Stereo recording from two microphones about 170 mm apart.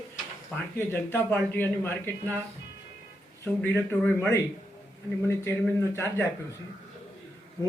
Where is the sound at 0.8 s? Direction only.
15° left (ahead or behind).